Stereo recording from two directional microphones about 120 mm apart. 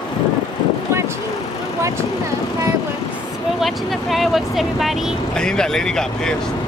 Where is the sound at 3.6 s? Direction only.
Centre (ahead or behind).